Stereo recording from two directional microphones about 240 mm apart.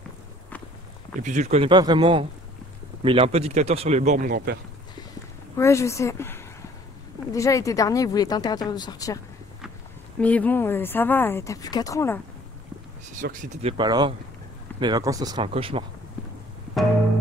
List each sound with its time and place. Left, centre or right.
1.2 s speech: right
5.6 s speech: centre
10.2 s speech: centre
13.1 s speech: right